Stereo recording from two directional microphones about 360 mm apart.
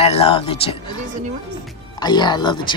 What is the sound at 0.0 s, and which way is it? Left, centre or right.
Speech, centre.